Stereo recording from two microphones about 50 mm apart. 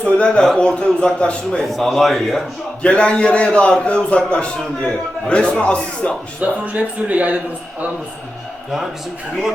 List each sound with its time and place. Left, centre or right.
0.0 s a man's voice: left
1.6 s speech: centre
2.8 s a man's voice: left
6.4 s speech: right